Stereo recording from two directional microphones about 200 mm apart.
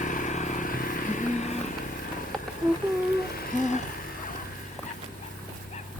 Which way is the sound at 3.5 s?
35° left (ahead or behind).